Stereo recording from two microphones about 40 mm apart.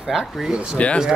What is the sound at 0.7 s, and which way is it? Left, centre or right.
Speech, left.